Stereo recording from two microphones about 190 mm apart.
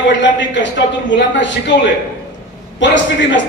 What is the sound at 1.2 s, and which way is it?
Speech, 70° left (ahead or behind).